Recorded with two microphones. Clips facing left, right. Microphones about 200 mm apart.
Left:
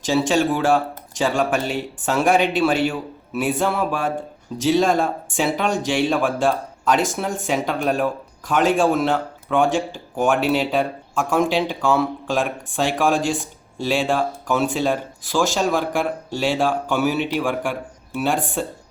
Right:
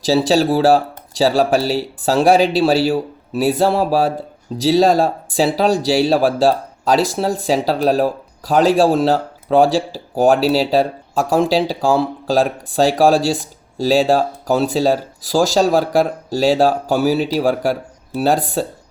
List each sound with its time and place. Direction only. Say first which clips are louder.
0.0 s speech: right 4 dB; 35° right (ahead or behind)